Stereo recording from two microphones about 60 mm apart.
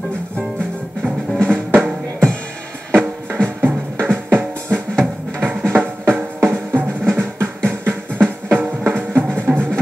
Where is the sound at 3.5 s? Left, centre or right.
Right.